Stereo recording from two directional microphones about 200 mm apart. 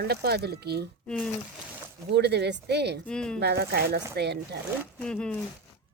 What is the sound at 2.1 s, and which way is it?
Speech, 55° right (ahead or behind).